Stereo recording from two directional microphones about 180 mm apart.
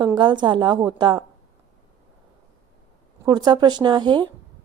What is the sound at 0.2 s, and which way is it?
A woman's voice, 25° right (ahead or behind).